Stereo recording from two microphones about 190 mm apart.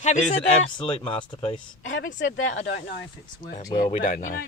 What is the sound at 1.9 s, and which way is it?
Speech, 75° left (ahead or behind).